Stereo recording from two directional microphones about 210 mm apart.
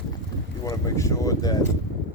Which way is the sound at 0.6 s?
15° left (ahead or behind).